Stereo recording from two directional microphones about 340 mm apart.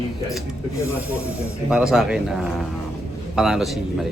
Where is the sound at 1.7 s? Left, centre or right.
Centre.